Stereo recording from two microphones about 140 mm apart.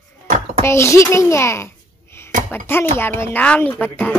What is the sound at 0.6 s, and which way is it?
Speech, 20° left (ahead or behind).